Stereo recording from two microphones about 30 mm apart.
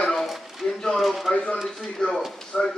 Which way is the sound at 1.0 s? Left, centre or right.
Centre.